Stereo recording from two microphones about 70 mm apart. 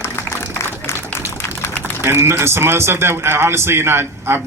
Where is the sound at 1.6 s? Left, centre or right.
Left.